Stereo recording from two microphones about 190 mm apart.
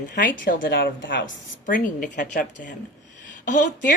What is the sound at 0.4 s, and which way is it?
Speech, 50° left (ahead or behind).